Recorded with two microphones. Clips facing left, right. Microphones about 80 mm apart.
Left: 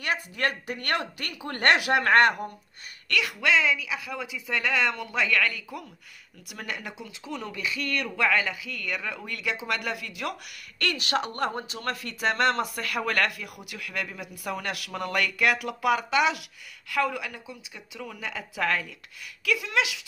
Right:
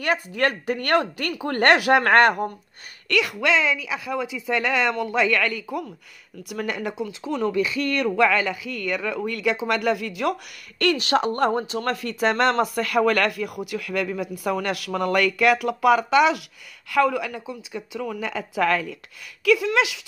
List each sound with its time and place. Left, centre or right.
0.0 s speech: right
1.9 s speech: right
4.9 s speech: right
11.9 s speech: right
12.7 s speech: right
15.6 s speech: right